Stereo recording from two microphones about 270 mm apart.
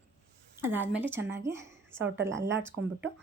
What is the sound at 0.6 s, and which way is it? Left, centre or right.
A woman's voice, centre.